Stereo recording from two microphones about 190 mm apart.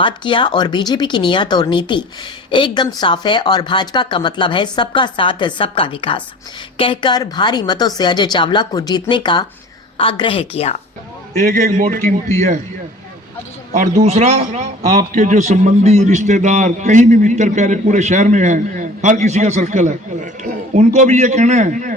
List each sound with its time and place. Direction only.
0.0 s speech: 25° left (ahead or behind)
11.5 s a man's voice: 45° right (ahead or behind)
11.9 s a man's voice: 10° left (ahead or behind)
14.0 s a man's voice: 35° right (ahead or behind)